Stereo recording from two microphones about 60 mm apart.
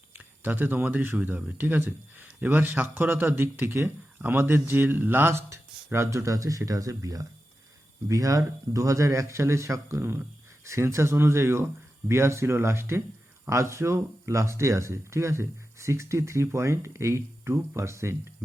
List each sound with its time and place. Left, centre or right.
0.1 s speech: right